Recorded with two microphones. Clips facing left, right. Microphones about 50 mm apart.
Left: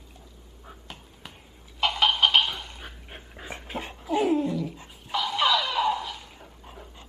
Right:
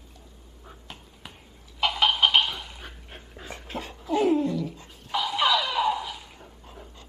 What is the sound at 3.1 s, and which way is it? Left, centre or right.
Dog, centre.